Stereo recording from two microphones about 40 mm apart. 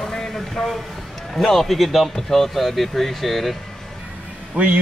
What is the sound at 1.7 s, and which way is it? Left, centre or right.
Speech, centre.